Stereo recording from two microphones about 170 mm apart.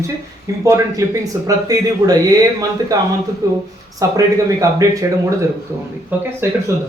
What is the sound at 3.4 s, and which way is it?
Speech, 20° right (ahead or behind).